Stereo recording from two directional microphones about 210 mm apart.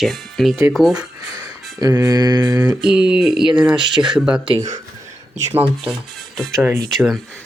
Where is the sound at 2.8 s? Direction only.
5° right (ahead or behind).